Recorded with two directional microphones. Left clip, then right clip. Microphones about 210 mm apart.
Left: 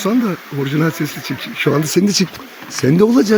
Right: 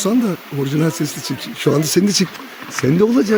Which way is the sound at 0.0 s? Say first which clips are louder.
Left 1 dB; centre (ahead or behind).